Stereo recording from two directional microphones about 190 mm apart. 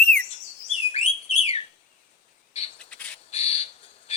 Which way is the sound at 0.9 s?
35° left (ahead or behind).